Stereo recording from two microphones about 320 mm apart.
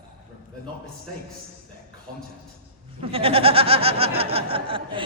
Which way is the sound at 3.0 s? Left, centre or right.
Centre.